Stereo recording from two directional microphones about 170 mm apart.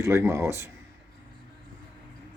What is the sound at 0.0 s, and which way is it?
Speech, 15° right (ahead or behind).